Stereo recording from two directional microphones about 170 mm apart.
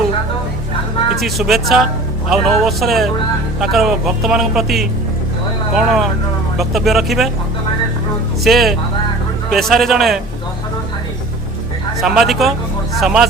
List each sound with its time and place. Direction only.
1.1 s a man's voice: centre (ahead or behind)
8.4 s a man's voice: centre (ahead or behind)
12.0 s a man's voice: centre (ahead or behind)